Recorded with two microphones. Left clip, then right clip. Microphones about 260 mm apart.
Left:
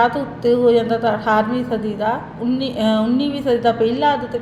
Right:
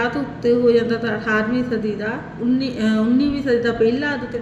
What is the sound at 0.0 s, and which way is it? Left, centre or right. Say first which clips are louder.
A woman's voice: left 4 dB; left.